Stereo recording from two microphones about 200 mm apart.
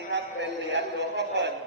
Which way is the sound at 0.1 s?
60° right (ahead or behind).